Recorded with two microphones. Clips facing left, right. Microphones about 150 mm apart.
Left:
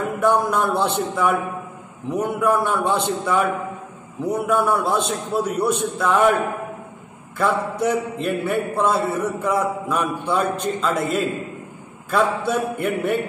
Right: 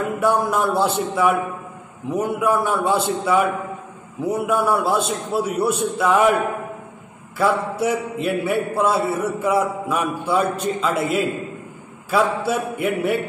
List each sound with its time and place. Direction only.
0.2 s a man's voice: 5° right (ahead or behind)
7.3 s a man's voice: 5° right (ahead or behind)